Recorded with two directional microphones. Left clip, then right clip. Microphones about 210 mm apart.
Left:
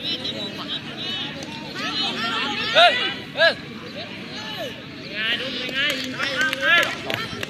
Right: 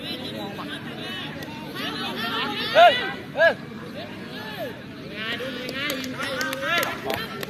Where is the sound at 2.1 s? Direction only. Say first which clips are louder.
Left 3 dB; 35° right (ahead or behind).